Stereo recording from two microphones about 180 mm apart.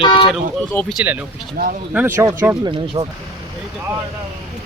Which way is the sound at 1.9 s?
10° right (ahead or behind).